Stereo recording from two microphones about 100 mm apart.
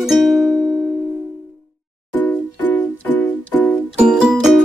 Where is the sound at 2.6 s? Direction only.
15° left (ahead or behind).